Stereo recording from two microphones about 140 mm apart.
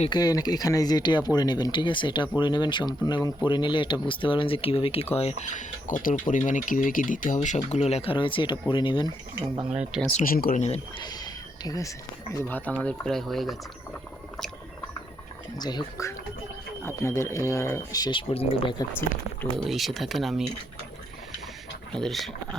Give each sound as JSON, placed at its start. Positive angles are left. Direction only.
{"t": 0.1, "sound": "speech", "side_deg": 30}
{"t": 5.4, "sound": "speech", "side_deg": 65}
{"t": 10.2, "sound": "speech", "side_deg": 90}
{"t": 10.9, "sound": "a sound", "side_deg": 30}
{"t": 12.5, "sound": "speech", "side_deg": 10}
{"t": 15.5, "sound": "speech", "side_deg": 30}
{"t": 18.9, "sound": "speech", "side_deg": 15}
{"t": 19.6, "sound": "speech", "side_deg": 0}
{"t": 21.9, "sound": "speech", "side_deg": 0}